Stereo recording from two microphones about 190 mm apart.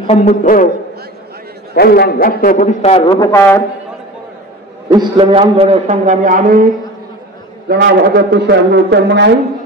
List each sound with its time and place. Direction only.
0.0 s a sound: 30° left (ahead or behind)
1.8 s a man's voice: 55° left (ahead or behind); by 3.2 s 30° left (ahead or behind)
3.2 s a man's voice: 15° left (ahead or behind)
4.8 s a man's voice: 20° right (ahead or behind); by 6.7 s 45° right (ahead or behind)
7.6 s a man's voice: 55° right (ahead or behind)